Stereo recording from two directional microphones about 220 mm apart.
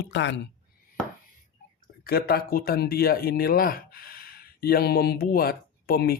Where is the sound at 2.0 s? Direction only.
45° left (ahead or behind).